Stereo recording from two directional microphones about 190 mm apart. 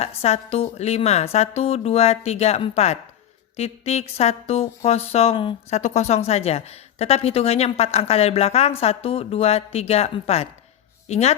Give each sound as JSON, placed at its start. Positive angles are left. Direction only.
{"t": 0.0, "sound": "speech", "side_deg": 35}